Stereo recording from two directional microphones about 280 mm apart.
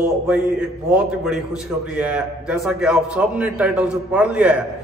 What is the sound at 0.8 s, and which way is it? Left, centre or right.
A man's voice, centre.